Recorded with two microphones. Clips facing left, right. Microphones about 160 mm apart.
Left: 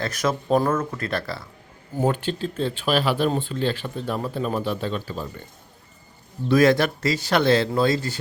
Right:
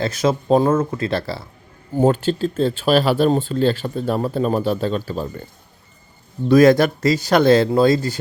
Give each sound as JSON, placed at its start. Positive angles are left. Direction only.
{"t": 0.0, "sound": "speech", "side_deg": -25}
{"t": 6.5, "sound": "speech", "side_deg": -40}